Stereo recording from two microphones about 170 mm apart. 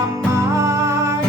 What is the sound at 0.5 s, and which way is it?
Music, 15° right (ahead or behind).